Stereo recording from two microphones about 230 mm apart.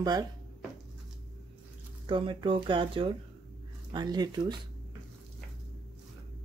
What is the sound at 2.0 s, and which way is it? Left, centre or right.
Speech, right.